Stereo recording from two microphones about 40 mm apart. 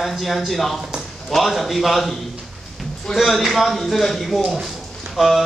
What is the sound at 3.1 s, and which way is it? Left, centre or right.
A man's voice, centre.